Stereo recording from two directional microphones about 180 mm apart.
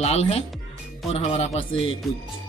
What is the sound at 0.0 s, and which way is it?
Speech, 35° left (ahead or behind).